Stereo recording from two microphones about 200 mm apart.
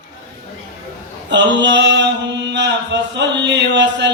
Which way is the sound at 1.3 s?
60° right (ahead or behind).